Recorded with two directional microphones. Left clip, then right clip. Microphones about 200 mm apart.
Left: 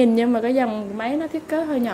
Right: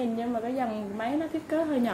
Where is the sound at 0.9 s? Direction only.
15° left (ahead or behind).